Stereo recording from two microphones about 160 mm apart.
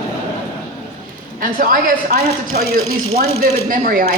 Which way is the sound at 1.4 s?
60° right (ahead or behind).